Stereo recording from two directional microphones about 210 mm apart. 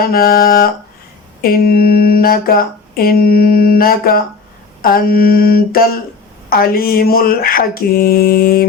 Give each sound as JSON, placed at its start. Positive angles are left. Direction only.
{"t": 0.0, "sound": "speech", "side_deg": 45}